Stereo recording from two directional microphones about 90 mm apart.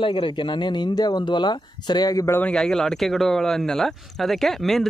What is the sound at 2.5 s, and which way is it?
Speech, 5° left (ahead or behind).